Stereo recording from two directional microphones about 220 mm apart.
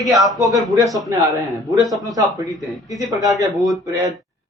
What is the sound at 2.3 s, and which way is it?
Speech, 15° right (ahead or behind).